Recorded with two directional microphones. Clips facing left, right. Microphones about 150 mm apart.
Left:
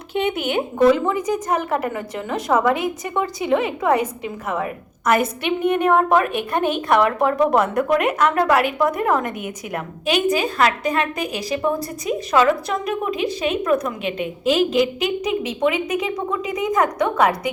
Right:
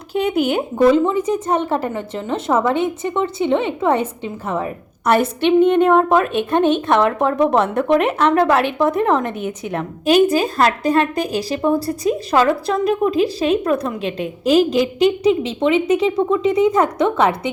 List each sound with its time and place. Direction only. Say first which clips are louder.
0.1 s a woman's voice: right 4 dB; 35° right (ahead or behind)